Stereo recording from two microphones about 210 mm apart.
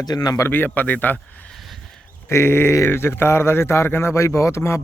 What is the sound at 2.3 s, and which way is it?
Speech, 10° left (ahead or behind).